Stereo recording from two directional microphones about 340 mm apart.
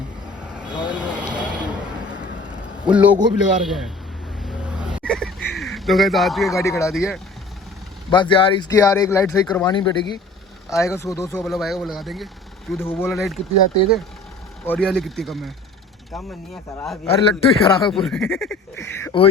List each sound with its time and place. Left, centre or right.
0.5 s vehicle: centre
2.8 s speech: centre
4.4 s a sound: centre
8.1 s speech: centre
14.7 s speech: centre
17.1 s speech: centre
17.9 s speech: centre